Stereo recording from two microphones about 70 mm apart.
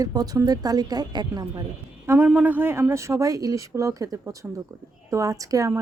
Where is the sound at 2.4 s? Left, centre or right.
Right.